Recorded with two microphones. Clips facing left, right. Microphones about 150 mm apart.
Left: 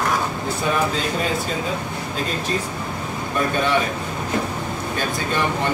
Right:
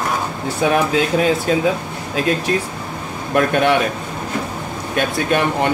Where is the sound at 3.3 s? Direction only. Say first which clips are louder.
Right 6 dB; 70° right (ahead or behind).